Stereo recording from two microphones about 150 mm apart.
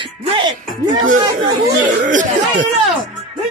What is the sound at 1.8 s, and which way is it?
Speech, 60° right (ahead or behind).